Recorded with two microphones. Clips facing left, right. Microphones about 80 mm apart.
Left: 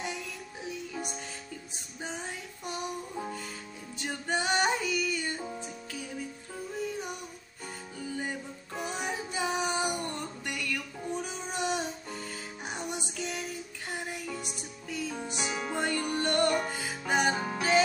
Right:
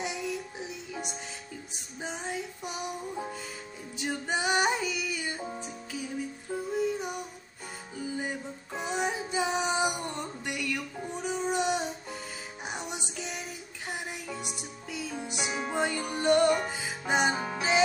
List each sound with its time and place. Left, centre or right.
0.0 s music: centre
8.0 s female singing: centre
12.6 s music: centre